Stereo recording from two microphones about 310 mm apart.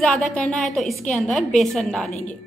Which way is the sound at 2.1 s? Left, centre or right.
Left.